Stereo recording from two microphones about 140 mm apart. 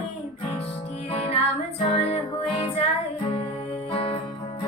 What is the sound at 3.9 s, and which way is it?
Music, 45° left (ahead or behind).